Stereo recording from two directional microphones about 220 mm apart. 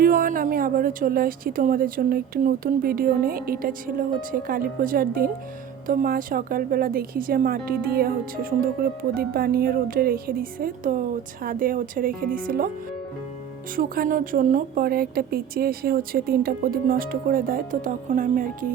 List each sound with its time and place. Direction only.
0.0 s a woman's voice: 40° right (ahead or behind)
13.7 s a woman's voice: 40° right (ahead or behind)